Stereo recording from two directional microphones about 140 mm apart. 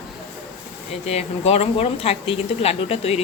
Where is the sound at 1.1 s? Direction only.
50° left (ahead or behind).